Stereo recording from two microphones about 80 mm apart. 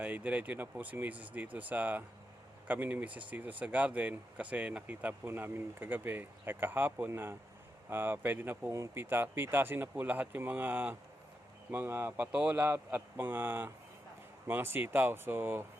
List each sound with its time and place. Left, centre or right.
0.0 s speech: centre
5.2 s speech: right
12.3 s speech: centre
12.5 s speech: right